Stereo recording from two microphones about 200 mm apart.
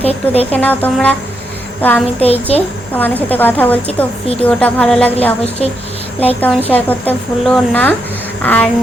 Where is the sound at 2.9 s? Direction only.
10° left (ahead or behind).